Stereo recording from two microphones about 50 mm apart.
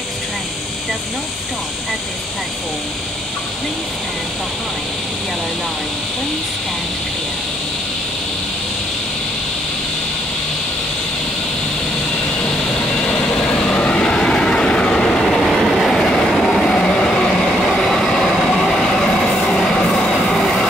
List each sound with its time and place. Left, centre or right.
12.4 s vehicle: left
15.4 s train: centre
16.0 s train: centre
16.7 s vehicle: left
17.3 s train: centre